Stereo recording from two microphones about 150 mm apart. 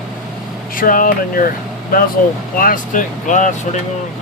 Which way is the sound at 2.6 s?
65° left (ahead or behind).